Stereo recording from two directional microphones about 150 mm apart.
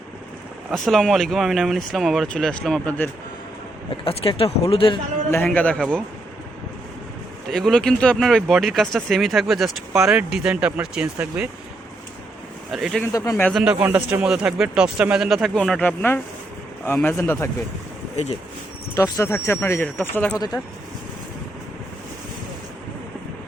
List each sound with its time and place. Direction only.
0.7 s speech: centre (ahead or behind)
4.0 s speech: 40° left (ahead or behind)
5.3 s speech: 10° left (ahead or behind)
7.5 s speech: centre (ahead or behind)
12.7 s speech: centre (ahead or behind)
13.1 s speech: 25° left (ahead or behind)
13.5 s speech: centre (ahead or behind); by 17.5 s 15° left (ahead or behind)
18.9 s speech: 25° left (ahead or behind)